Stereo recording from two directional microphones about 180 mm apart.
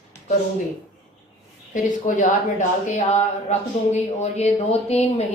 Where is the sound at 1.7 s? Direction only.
45° left (ahead or behind).